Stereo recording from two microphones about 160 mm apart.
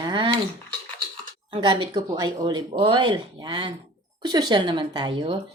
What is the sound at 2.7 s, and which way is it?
A woman's voice, 35° right (ahead or behind).